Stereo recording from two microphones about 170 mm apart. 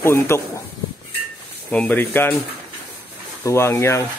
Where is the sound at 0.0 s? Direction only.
15° left (ahead or behind).